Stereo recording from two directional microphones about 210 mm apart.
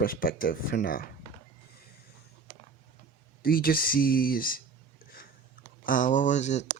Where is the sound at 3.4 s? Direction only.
45° left (ahead or behind).